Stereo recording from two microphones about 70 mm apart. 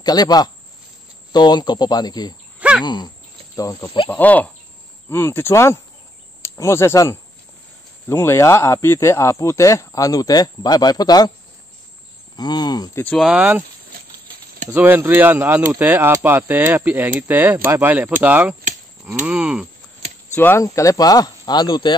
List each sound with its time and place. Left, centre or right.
0.0 s speech: left
1.3 s speech: left
2.8 s a sound: left
3.5 s speech: left
4.1 s speech: left
5.1 s speech: left
12.4 s speech: left
13.3 s a sound: centre
14.7 s speech: right; by 18.6 s centre
19.2 s a sound: centre
20.5 s speech: left